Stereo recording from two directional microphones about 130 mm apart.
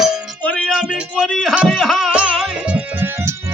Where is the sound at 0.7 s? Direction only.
5° right (ahead or behind).